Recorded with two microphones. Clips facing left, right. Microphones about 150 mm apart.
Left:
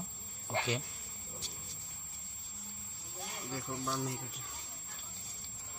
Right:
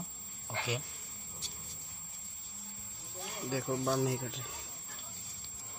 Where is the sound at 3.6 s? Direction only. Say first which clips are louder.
Right 7 dB; 65° right (ahead or behind); by 4.5 s 90° right.